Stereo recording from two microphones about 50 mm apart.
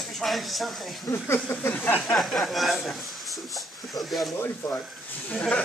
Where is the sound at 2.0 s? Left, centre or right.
Centre.